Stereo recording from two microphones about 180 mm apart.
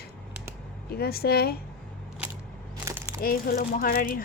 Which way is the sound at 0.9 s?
60° left (ahead or behind).